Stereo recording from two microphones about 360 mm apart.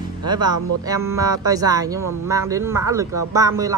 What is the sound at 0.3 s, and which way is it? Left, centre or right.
A woman's voice, centre.